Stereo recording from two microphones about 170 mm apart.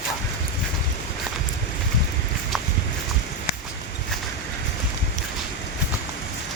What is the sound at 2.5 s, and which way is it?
Horse, centre (ahead or behind).